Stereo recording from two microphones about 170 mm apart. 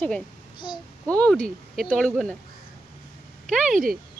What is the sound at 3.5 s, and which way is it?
Speech, centre (ahead or behind).